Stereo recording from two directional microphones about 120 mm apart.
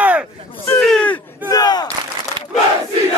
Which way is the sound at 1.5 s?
35° left (ahead or behind).